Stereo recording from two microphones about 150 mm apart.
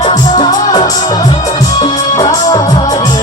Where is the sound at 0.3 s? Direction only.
30° left (ahead or behind).